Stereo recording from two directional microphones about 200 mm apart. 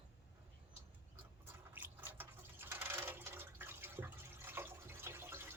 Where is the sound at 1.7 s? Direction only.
10° right (ahead or behind).